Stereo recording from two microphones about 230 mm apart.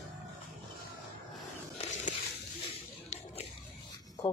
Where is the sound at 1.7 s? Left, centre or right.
Left.